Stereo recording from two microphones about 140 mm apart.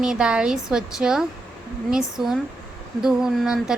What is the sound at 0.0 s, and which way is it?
Speech, 5° right (ahead or behind).